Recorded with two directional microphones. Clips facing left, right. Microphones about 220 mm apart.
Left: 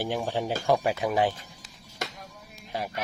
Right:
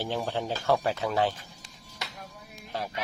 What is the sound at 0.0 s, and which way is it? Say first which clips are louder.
Speech: left 2 dB; 10° left (ahead or behind).